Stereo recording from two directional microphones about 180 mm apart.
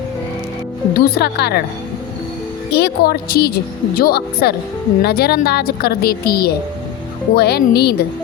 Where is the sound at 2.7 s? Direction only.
60° left (ahead or behind).